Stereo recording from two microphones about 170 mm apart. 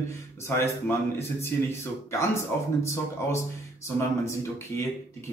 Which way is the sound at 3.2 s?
15° left (ahead or behind).